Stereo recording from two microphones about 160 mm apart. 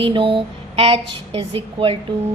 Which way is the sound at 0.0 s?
35° right (ahead or behind).